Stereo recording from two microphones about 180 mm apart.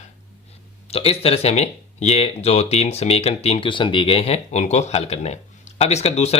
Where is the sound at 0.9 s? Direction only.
35° left (ahead or behind).